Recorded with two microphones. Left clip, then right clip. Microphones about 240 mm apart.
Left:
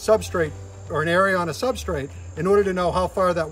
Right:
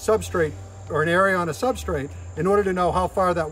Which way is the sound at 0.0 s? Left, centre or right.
Centre.